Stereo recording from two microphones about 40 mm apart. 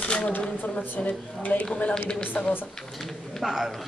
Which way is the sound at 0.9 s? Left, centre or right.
Left.